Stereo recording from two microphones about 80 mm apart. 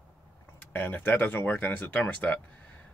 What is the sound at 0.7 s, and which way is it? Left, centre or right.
Speech, left.